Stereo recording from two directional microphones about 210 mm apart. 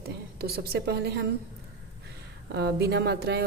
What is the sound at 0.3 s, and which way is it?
Speech, 50° right (ahead or behind).